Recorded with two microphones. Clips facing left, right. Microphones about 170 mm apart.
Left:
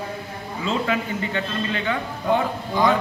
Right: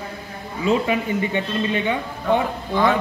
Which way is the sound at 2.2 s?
15° left (ahead or behind).